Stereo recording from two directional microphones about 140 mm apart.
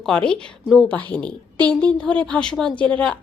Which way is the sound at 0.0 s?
5° left (ahead or behind).